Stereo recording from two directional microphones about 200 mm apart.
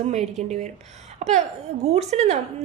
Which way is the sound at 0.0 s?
35° right (ahead or behind).